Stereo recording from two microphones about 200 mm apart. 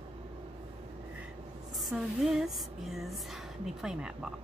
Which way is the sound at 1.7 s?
Centre (ahead or behind).